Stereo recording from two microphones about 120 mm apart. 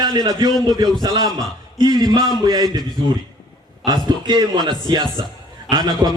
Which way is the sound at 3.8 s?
35° right (ahead or behind).